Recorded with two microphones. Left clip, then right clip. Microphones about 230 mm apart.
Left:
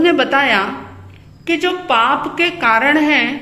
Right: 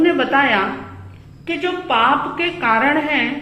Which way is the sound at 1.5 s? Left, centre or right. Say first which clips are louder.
Left 4 dB; left.